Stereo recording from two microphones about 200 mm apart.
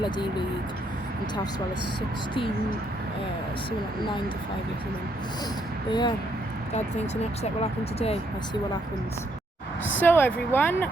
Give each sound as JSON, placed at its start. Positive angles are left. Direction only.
{"t": 0.0, "sound": "speech", "side_deg": 20}
{"t": 5.9, "sound": "speech", "side_deg": 20}
{"t": 7.6, "sound": "speech", "side_deg": 30}
{"t": 10.0, "sound": "speech", "side_deg": 10}